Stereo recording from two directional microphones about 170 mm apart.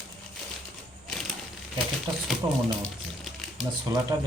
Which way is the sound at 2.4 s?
15° right (ahead or behind).